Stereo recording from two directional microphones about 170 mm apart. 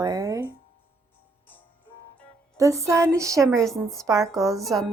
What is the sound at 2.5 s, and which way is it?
Music, 20° right (ahead or behind).